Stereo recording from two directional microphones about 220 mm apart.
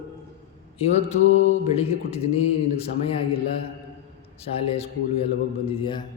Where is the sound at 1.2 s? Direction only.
60° left (ahead or behind).